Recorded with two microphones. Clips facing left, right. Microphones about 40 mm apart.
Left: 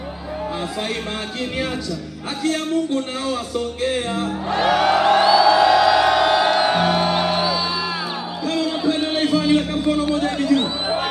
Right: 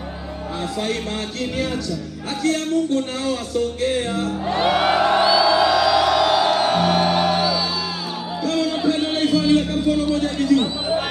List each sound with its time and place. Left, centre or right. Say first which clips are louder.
2.4 s speech: right 1 dB; centre
3.8 s music: even; centre
4.6 s music: left 1 dB; centre
5.2 s music: left 2 dB; centre
6.9 s music: right 1 dB; centre
9.2 s a sound: right 1 dB; centre